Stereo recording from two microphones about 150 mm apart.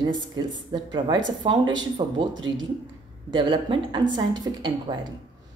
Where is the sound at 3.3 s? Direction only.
30° right (ahead or behind).